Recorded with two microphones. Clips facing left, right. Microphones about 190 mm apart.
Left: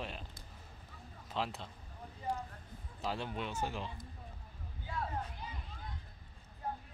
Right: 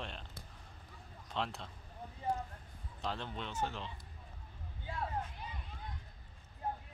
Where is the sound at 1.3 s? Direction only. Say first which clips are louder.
Left 1 dB; 5° left (ahead or behind).